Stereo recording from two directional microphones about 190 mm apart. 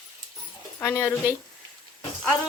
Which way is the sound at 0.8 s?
10° left (ahead or behind).